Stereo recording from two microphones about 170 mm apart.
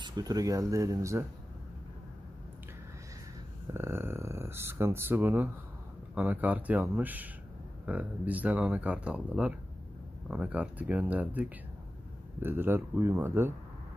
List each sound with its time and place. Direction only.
0.0 s speech: 25° right (ahead or behind)
3.7 s speech: 15° right (ahead or behind)